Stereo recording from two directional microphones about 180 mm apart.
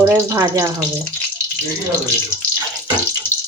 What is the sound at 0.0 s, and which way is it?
Speech, 15° right (ahead or behind).